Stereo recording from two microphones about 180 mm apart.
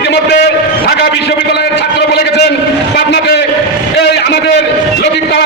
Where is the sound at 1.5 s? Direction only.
70° left (ahead or behind).